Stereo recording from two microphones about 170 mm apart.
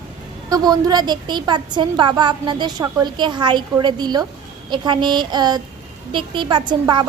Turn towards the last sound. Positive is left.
turn(degrees=-25)  # may be behind; listen again after turning